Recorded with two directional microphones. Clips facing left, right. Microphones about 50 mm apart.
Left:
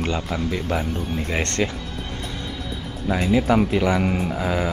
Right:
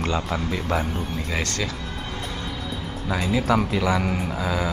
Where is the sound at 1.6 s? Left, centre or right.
Left.